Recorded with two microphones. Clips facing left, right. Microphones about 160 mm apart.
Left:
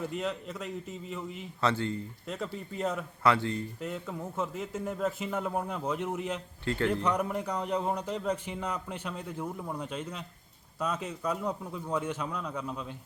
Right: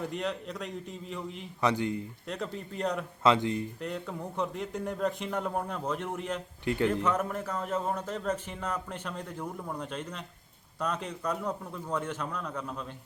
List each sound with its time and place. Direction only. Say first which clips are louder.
0.0 s a man's voice: even; centre (ahead or behind)
1.6 s a man's voice: right 1 dB; 15° right (ahead or behind)
2.2 s a man's voice: even; centre (ahead or behind)
3.2 s a man's voice: right 2 dB; 20° right (ahead or behind)
3.8 s a man's voice: even; centre (ahead or behind)
6.7 s a man's voice: right 2 dB; 15° right (ahead or behind)
6.9 s a man's voice: even; 15° left (ahead or behind)